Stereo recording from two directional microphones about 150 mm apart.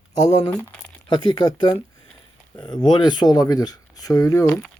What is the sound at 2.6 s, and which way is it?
Speech, 30° left (ahead or behind).